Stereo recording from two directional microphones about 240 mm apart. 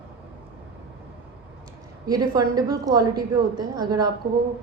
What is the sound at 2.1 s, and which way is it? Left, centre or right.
A woman's voice, centre.